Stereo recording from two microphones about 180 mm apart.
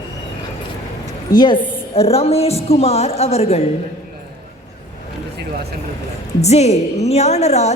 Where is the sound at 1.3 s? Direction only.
25° left (ahead or behind).